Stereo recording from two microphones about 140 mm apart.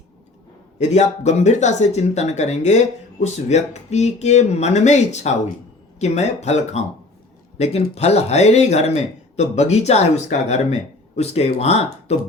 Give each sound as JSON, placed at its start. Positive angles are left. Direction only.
{"t": 0.8, "sound": "speech", "side_deg": 55}